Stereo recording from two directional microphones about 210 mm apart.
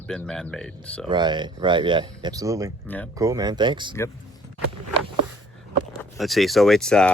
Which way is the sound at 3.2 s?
15° right (ahead or behind).